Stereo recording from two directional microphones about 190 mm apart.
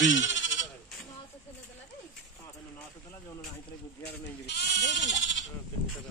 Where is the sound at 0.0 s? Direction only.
80° left.